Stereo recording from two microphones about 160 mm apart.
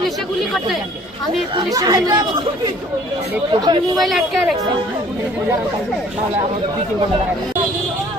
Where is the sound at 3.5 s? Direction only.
25° right (ahead or behind).